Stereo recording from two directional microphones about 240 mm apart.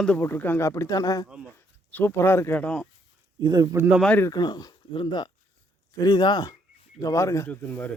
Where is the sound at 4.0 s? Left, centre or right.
Centre.